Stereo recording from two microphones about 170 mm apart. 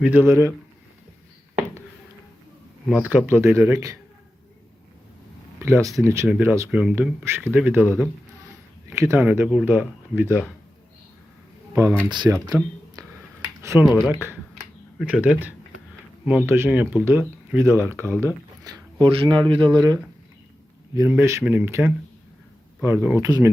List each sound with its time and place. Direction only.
0.0 s speech: 10° right (ahead or behind)
3.0 s speech: 10° right (ahead or behind)
5.6 s speech: 15° right (ahead or behind)
11.7 s speech: 15° right (ahead or behind)
12.1 s speech: 25° right (ahead or behind)
13.0 s a sound: 20° right (ahead or behind)
13.6 s speech: 15° right (ahead or behind)
15.0 s speech: 5° right (ahead or behind)